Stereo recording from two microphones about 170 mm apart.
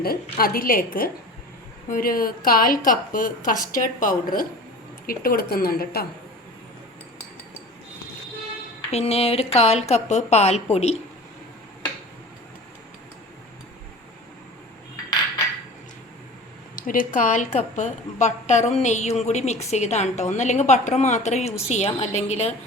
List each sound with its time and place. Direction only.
0.0 s a woman's voice: 60° left (ahead or behind)
8.9 s speech: 35° left (ahead or behind)
16.7 s a woman's voice: 55° left (ahead or behind)